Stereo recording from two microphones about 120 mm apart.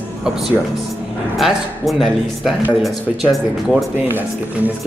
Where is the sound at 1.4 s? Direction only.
Centre (ahead or behind).